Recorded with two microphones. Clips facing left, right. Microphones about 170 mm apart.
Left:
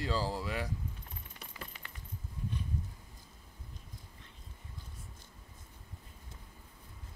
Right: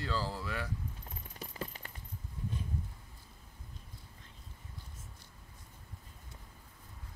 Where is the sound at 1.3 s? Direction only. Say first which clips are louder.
Right 8 dB; 40° right (ahead or behind).